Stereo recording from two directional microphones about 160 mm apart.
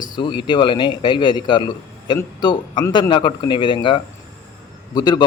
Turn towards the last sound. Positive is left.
turn(degrees=25)  # may be behind; listen again after turning